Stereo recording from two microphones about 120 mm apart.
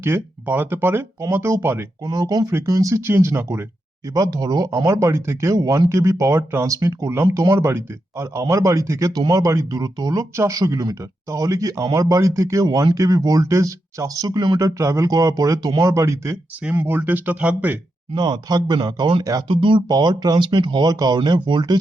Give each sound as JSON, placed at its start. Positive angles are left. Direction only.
{"t": 0.0, "sound": "speech", "side_deg": -20}
{"t": 2.0, "sound": "speech", "side_deg": -30}
{"t": 18.1, "sound": "speech", "side_deg": -35}
{"t": 19.9, "sound": "speech", "side_deg": -35}